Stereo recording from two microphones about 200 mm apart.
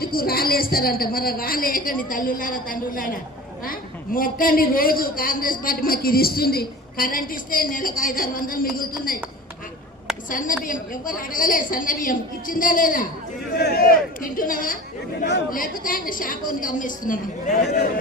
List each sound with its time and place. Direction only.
0.0 s a man's voice: 50° left (ahead or behind)
10.2 s a man's voice: 40° left (ahead or behind)
15.2 s a man's voice: 55° left (ahead or behind)